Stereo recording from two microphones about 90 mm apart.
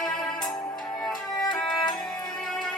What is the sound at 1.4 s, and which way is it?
Music, 5° left (ahead or behind).